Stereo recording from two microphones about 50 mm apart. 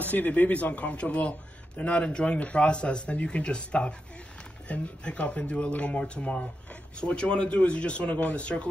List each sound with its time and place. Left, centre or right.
0.0 s speech: left